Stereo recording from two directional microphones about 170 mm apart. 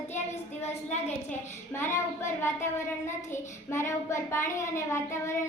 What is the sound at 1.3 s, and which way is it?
A child's voice, 15° left (ahead or behind).